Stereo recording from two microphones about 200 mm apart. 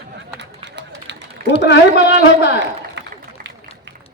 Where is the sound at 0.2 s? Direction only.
60° right (ahead or behind).